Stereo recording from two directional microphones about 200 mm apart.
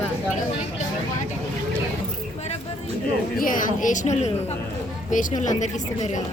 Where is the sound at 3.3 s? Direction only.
45° left (ahead or behind).